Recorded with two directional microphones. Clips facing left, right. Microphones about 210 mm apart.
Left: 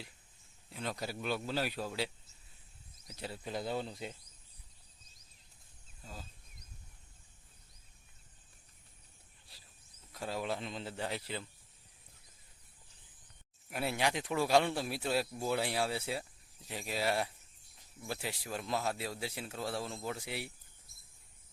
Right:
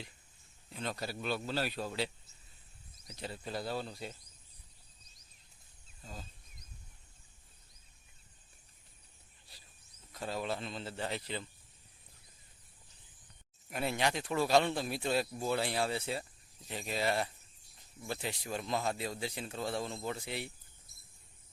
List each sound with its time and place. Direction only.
0.7 s a man's voice: 10° left (ahead or behind)
3.1 s a man's voice: 10° left (ahead or behind)
6.0 s speech: 5° left (ahead or behind)
10.1 s a man's voice: 10° left (ahead or behind)
13.7 s a man's voice: 5° left (ahead or behind)